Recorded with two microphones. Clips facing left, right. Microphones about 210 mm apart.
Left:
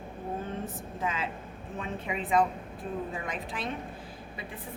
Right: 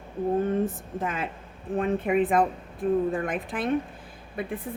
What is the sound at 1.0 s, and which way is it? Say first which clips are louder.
A woman's voice: right 1 dB; 55° right (ahead or behind).